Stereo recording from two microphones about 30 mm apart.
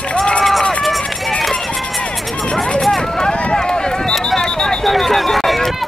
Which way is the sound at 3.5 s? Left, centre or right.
Left.